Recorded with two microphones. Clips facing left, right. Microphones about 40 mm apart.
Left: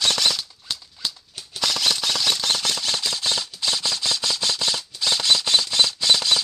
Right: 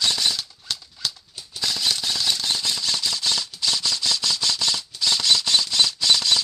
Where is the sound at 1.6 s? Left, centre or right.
Left.